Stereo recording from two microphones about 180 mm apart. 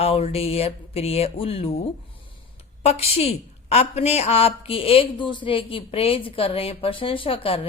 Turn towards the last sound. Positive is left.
turn(degrees=30)  # may be behind; listen again after turning